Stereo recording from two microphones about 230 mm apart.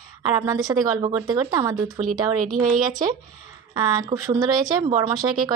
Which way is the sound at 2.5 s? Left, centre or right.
Right.